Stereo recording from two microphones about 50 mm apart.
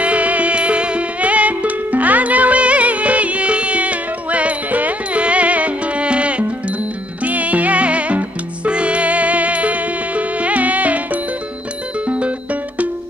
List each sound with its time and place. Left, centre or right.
0.0 s music: right